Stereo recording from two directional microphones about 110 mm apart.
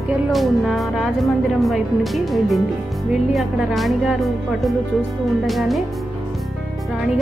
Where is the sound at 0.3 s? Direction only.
Centre (ahead or behind).